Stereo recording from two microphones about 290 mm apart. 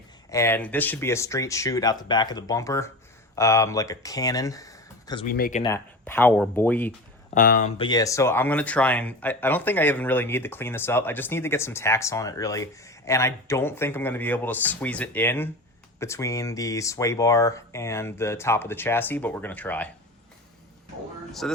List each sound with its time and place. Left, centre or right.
0.3 s speech: centre
5.2 s speech: left
5.6 s speech: centre
7.3 s speech: left
7.8 s speech: centre
21.4 s speech: centre